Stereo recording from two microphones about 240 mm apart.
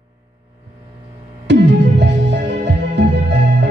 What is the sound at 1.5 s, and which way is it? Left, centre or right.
Music, right.